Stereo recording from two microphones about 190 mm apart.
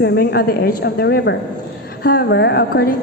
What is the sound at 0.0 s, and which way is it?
A woman's voice, 60° left (ahead or behind).